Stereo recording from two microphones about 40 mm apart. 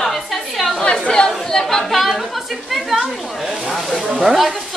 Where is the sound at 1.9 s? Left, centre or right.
Centre.